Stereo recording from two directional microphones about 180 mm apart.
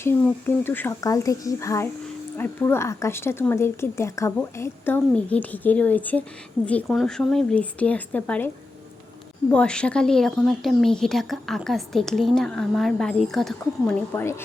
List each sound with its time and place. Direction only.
0.0 s speech: 10° left (ahead or behind)
9.5 s a woman's voice: 5° left (ahead or behind)
14.1 s speech: 15° left (ahead or behind)